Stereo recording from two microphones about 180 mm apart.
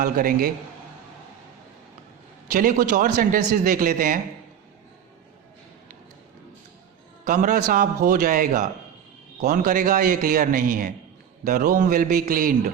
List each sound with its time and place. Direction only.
0.0 s a man's voice: 50° right (ahead or behind)
2.5 s a man's voice: 50° right (ahead or behind)
7.3 s a man's voice: 50° right (ahead or behind)